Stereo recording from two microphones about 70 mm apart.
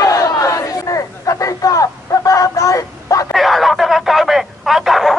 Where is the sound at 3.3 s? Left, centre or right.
Centre.